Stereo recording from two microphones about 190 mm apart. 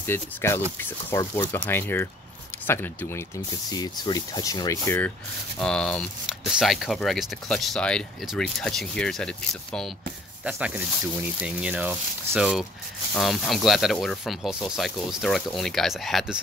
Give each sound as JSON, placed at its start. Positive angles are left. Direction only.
{"t": 0.0, "sound": "speech", "side_deg": 10}
{"t": 10.4, "sound": "speech", "side_deg": -5}